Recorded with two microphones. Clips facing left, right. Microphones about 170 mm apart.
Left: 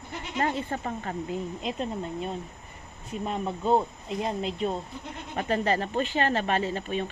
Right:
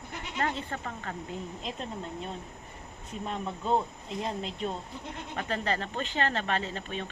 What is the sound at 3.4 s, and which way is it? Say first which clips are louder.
Speech: left 4 dB; 30° left (ahead or behind).